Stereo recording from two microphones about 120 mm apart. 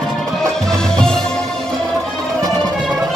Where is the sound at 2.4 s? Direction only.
30° right (ahead or behind).